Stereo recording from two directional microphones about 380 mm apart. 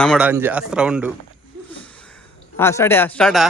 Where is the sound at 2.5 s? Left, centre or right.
Centre.